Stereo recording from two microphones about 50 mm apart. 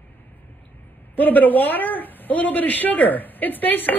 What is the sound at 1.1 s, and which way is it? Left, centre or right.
A man's voice, left.